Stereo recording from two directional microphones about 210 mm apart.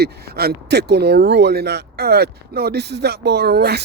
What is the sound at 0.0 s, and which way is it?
Speech, 50° right (ahead or behind).